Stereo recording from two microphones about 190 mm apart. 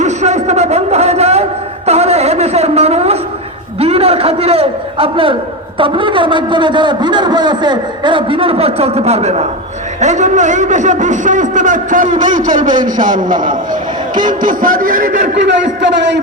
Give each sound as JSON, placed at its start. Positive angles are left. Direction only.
{"t": 0.0, "sound": "a sound", "side_deg": -35}
{"t": 3.8, "sound": "a man's voice", "side_deg": -30}
{"t": 15.4, "sound": "a man's voice", "side_deg": -65}